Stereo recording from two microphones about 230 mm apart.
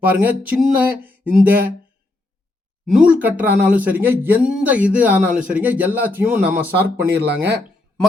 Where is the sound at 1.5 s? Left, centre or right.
Right.